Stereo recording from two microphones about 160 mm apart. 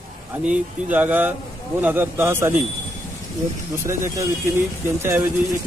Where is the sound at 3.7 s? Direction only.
20° right (ahead or behind).